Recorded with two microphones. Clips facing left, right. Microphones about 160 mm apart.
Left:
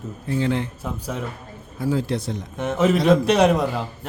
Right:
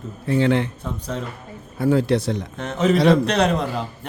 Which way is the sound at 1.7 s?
65° right (ahead or behind).